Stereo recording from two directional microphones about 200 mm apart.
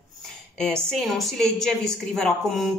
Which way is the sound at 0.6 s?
5° left (ahead or behind).